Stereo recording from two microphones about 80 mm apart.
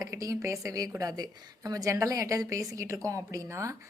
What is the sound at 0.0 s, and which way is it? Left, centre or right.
A woman's voice, right.